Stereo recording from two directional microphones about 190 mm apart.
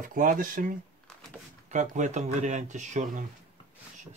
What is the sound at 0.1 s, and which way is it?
Speech, 45° right (ahead or behind).